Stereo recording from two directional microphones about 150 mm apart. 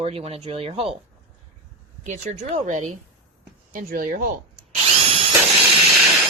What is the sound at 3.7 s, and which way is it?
Speech, 70° right (ahead or behind).